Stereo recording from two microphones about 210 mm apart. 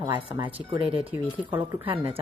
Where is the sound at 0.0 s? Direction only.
20° right (ahead or behind).